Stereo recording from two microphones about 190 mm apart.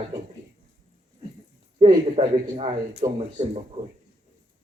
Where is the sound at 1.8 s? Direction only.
30° right (ahead or behind).